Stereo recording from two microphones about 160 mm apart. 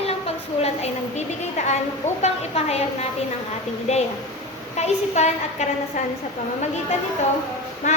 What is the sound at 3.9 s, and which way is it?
A woman's voice, 45° left (ahead or behind).